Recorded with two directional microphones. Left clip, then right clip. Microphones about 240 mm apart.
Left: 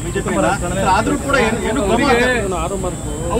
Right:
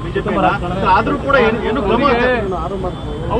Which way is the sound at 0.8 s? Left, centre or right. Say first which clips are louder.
Right 3 dB; left.